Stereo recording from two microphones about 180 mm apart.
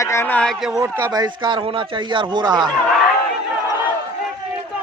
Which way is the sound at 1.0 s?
20° right (ahead or behind).